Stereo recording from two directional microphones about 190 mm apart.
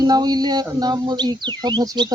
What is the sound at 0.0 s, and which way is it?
Speech, 20° right (ahead or behind).